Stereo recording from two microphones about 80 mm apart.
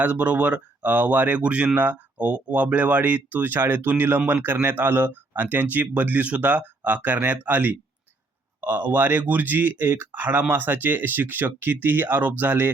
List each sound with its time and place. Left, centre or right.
0.0 s speech: centre